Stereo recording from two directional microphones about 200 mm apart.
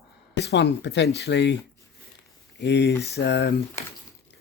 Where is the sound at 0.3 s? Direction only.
60° left (ahead or behind).